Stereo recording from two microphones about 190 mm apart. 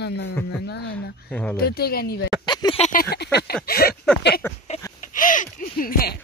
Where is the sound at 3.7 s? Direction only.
50° left (ahead or behind).